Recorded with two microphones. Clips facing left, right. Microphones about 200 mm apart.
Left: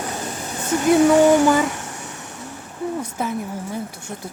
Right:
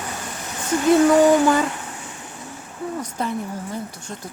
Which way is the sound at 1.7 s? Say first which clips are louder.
Left 2 dB; 75° left (ahead or behind).